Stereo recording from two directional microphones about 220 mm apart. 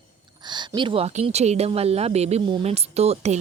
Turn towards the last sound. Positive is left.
turn(degrees=-30)  # may be behind; listen again after turning